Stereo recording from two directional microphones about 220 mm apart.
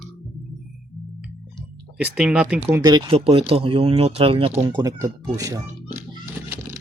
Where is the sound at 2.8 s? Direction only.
20° right (ahead or behind).